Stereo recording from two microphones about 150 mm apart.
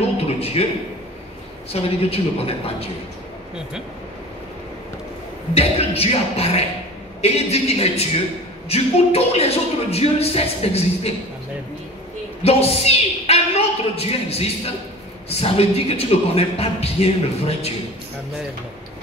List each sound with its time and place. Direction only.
0.2 s a man's voice: 40° left (ahead or behind)
1.7 s a man's voice: 40° left (ahead or behind)
5.5 s a man's voice: 40° left (ahead or behind)
12.4 s a woman's voice: 40° left (ahead or behind)